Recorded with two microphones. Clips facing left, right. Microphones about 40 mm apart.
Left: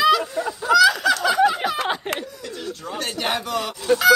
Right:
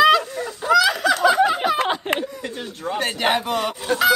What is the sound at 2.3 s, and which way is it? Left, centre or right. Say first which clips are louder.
Speech: right 1 dB; right.